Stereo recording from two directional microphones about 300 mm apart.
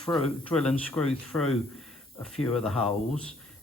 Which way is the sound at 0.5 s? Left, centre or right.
Centre.